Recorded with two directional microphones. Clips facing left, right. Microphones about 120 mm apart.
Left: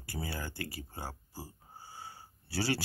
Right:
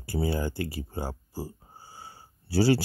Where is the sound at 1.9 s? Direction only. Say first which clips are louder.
Right 1 dB; 30° right (ahead or behind).